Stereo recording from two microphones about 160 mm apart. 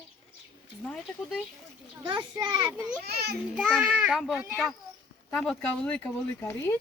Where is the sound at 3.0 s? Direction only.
85° right.